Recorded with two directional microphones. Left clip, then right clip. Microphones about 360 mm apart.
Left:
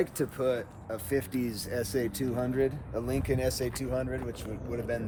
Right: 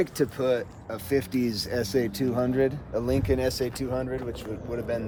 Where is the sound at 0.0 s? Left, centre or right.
Right.